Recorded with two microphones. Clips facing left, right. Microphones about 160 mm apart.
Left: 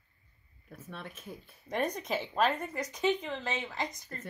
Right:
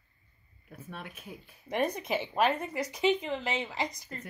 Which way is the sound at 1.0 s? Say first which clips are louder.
Even; 10° right (ahead or behind).